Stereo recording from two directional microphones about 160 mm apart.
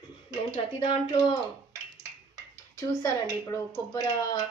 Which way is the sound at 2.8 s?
20° left (ahead or behind).